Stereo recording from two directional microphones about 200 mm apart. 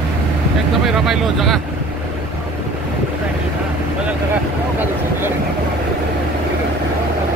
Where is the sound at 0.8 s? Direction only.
Centre (ahead or behind).